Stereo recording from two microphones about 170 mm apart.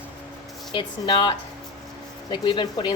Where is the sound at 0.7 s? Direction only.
30° left (ahead or behind).